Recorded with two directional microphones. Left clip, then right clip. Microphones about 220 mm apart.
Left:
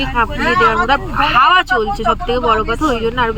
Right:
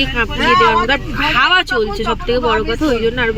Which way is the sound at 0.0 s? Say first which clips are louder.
Even; centre (ahead or behind).